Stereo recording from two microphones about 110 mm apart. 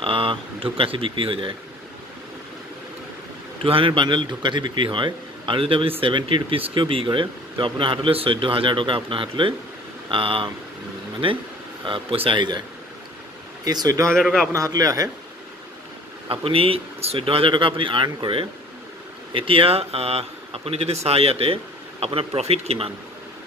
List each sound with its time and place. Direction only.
0.0 s speech: 55° right (ahead or behind)
3.6 s a man's voice: 55° right (ahead or behind)
11.8 s a man's voice: 50° right (ahead or behind)
13.7 s speech: 35° right (ahead or behind)
14.2 s a man's voice: centre (ahead or behind)
14.5 s speech: 30° right (ahead or behind)
16.3 s speech: 55° right (ahead or behind)